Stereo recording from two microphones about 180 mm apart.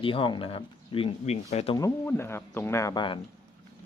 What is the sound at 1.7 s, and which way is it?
Speech, 15° left (ahead or behind).